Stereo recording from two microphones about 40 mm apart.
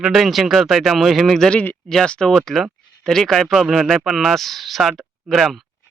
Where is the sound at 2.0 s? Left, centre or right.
Left.